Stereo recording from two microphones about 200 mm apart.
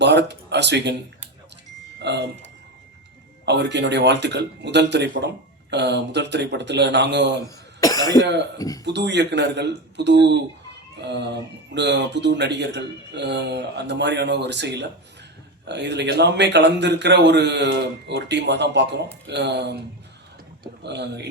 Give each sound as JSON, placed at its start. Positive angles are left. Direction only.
{"t": 0.0, "sound": "speech", "side_deg": -60}
{"t": 2.0, "sound": "a man's voice", "side_deg": -60}
{"t": 7.8, "sound": "cough", "side_deg": 20}
{"t": 8.5, "sound": "speech", "side_deg": 15}
{"t": 8.8, "sound": "a man's voice", "side_deg": -60}
{"t": 20.8, "sound": "a man's voice", "side_deg": -60}